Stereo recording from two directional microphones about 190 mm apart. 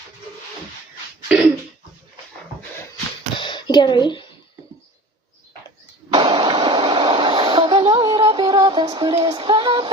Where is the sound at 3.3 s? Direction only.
25° left (ahead or behind).